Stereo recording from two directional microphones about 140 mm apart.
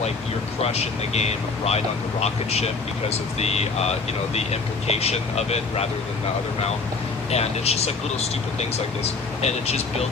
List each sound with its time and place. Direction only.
0.6 s speech: 45° left (ahead or behind)
7.3 s speech: 50° left (ahead or behind)